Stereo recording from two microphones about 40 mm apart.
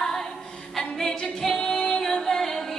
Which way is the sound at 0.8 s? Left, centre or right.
Centre.